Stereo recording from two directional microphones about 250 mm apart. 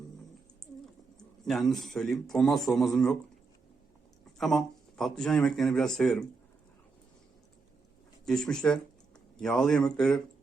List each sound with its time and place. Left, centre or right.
1.5 s speech: centre
4.4 s speech: centre
8.2 s speech: centre